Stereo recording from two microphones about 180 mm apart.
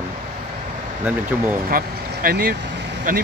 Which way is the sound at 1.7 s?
55° right (ahead or behind).